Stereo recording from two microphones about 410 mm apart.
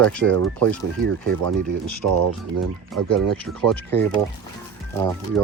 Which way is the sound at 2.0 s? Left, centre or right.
Right.